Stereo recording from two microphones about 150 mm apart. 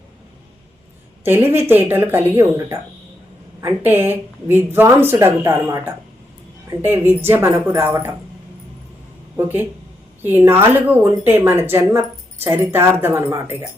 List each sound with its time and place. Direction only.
1.2 s a woman's voice: 15° right (ahead or behind)
9.3 s a woman's voice: 15° right (ahead or behind)